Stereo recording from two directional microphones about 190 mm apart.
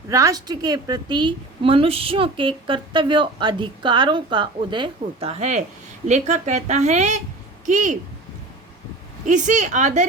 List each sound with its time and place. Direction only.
0.1 s a woman's voice: 20° right (ahead or behind); by 7.9 s 40° right (ahead or behind)
9.2 s speech: 40° right (ahead or behind)